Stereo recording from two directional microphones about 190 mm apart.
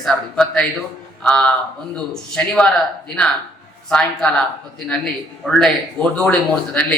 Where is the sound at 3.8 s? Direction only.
5° left (ahead or behind).